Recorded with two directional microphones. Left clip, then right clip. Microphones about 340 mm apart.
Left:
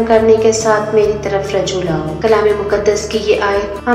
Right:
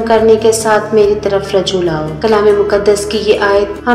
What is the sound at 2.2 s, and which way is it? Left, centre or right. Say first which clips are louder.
Speech: right 3 dB; right.